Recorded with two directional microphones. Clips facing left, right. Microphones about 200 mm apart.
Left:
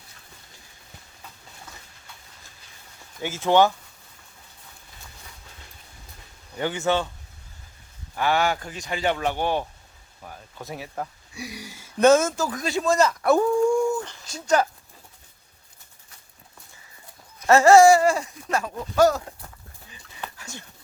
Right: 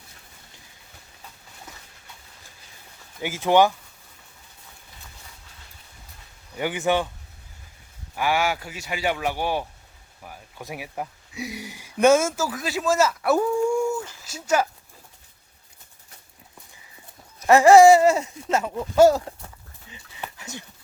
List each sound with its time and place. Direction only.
3.2 s speech: 15° right (ahead or behind)
6.6 s speech: 15° right (ahead or behind)
8.1 s speech: 10° right (ahead or behind)
17.4 s speech: 15° right (ahead or behind)
19.9 s dog: 20° right (ahead or behind)